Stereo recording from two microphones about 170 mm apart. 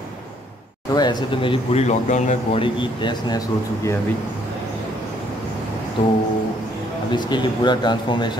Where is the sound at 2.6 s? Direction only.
30° left (ahead or behind).